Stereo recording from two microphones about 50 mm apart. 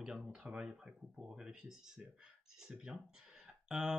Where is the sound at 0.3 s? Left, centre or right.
Centre.